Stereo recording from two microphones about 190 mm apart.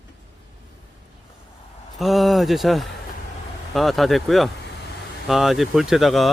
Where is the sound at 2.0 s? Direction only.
Centre (ahead or behind).